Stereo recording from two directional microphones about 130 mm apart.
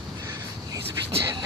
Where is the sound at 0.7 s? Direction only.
30° right (ahead or behind).